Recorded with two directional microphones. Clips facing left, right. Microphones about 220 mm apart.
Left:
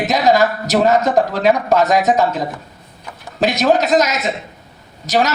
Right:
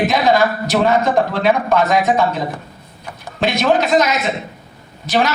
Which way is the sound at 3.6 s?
40° left (ahead or behind).